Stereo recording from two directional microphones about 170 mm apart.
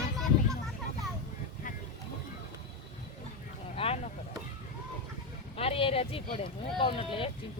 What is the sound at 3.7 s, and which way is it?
Vehicle, 35° left (ahead or behind).